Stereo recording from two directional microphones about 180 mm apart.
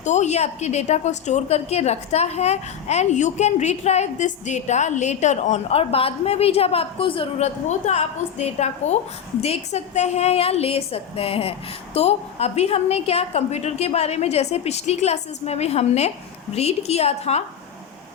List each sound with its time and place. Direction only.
0.0 s a woman's voice: 40° left (ahead or behind)